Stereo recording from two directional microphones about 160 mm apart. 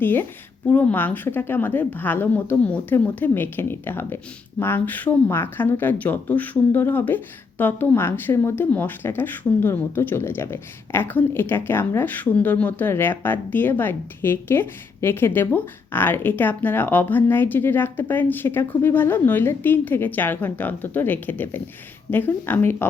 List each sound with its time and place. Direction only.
0.0 s speech: 10° left (ahead or behind)